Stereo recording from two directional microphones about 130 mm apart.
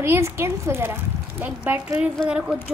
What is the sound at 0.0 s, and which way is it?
A woman's voice, 20° right (ahead or behind).